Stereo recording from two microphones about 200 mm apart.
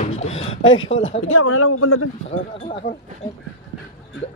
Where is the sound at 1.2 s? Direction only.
90° left.